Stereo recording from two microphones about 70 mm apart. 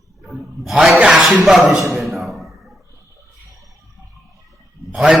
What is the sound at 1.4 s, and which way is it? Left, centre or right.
Speech, centre.